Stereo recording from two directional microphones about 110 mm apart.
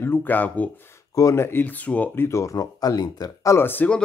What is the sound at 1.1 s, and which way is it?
Speech, 25° left (ahead or behind).